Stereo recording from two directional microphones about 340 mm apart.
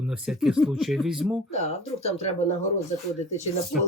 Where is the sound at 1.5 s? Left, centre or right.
Centre.